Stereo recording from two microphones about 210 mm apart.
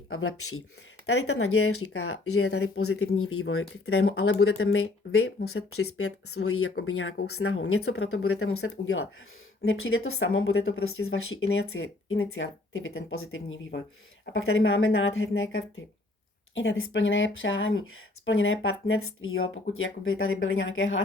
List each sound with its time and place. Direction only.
0.1 s speech: 80° left
5.5 s speech: 90° left; by 21.0 s 70° left (ahead or behind)